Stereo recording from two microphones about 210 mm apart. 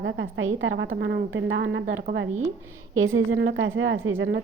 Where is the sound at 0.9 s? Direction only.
55° right (ahead or behind).